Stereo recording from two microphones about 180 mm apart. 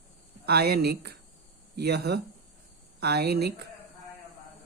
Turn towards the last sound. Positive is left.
turn(degrees=-65)  # may be behind; listen again after turning